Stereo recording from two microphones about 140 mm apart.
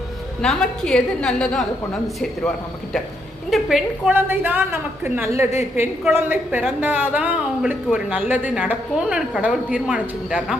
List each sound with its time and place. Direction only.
0.4 s a woman's voice: 5° left (ahead or behind)
3.5 s a woman's voice: 5° right (ahead or behind)
4.1 s a woman's voice: 15° right (ahead or behind)